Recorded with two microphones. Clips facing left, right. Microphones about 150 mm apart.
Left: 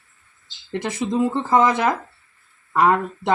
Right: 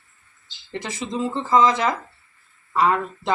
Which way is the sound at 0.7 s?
60° left (ahead or behind).